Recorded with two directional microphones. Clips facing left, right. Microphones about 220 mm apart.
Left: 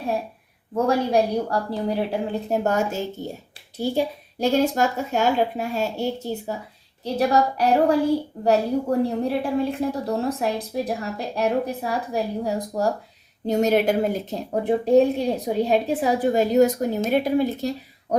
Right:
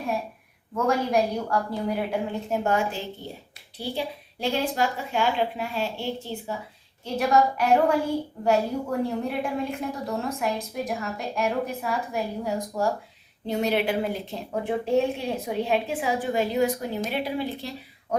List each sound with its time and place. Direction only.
0.8 s a woman's voice: 35° left (ahead or behind)